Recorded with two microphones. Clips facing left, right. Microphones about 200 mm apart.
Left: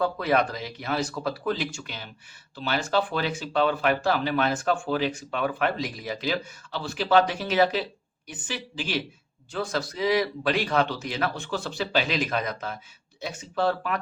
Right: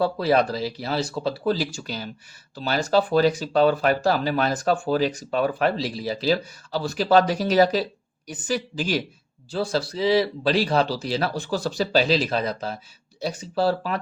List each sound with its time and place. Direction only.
0.0 s speech: 30° right (ahead or behind)
9.5 s speech: 30° right (ahead or behind)